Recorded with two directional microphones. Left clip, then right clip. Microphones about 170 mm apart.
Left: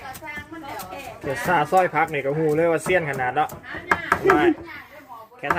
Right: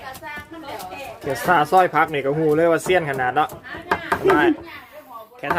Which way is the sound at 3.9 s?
20° right (ahead or behind).